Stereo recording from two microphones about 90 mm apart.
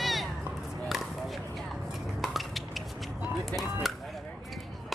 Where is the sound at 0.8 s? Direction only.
Centre (ahead or behind).